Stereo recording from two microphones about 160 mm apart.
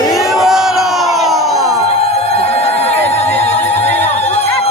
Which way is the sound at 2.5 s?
40° left (ahead or behind).